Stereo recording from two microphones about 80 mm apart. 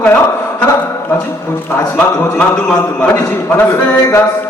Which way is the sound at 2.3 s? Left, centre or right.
Centre.